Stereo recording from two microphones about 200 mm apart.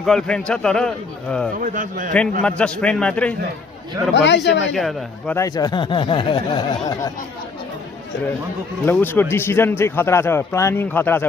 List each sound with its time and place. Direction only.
0.0 s a man's voice: 5° left (ahead or behind)
1.6 s a man's voice: 40° right (ahead or behind)
2.4 s a man's voice: 5° left (ahead or behind)
4.1 s a man's voice: 60° left (ahead or behind)
4.7 s a man's voice: 5° left (ahead or behind)
5.4 s speech: 20° left (ahead or behind)
8.8 s speech: 10° left (ahead or behind)